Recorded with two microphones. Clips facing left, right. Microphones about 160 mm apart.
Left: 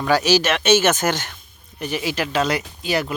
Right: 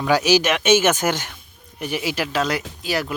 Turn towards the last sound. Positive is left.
turn(degrees=0)  # may be behind; listen again after turning